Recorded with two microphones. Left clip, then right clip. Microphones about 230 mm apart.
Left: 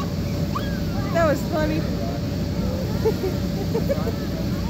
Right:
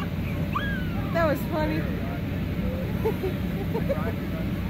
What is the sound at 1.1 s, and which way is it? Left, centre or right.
Speech, right.